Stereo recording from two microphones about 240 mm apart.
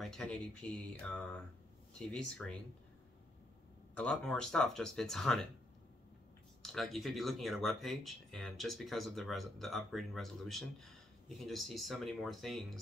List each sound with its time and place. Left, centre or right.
0.0 s speech: centre
3.9 s speech: centre
6.6 s speech: centre